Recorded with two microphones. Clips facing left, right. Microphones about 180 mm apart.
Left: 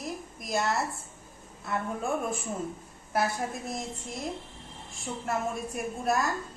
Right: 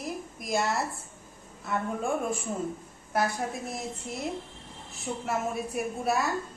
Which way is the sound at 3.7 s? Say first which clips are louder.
Even; 5° right (ahead or behind).